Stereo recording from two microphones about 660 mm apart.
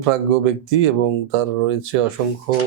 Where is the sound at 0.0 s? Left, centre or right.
Right.